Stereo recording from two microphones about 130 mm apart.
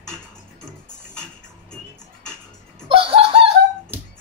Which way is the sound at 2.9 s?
45° right (ahead or behind).